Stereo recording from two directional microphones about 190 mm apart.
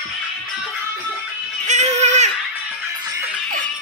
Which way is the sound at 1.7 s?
35° right (ahead or behind).